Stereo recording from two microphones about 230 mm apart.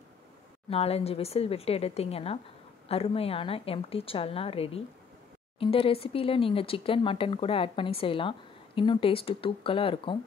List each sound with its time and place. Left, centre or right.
0.7 s speech: left